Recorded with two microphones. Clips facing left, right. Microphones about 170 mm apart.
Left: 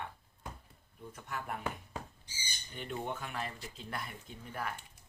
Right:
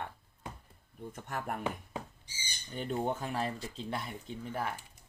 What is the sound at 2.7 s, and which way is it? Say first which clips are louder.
Speech: right 6 dB; 40° right (ahead or behind).